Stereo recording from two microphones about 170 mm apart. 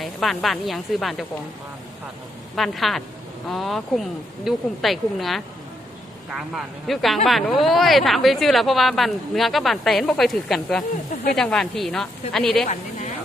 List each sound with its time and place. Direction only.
0.0 s speech: centre (ahead or behind)
2.6 s speech: centre (ahead or behind)
6.5 s speech: centre (ahead or behind)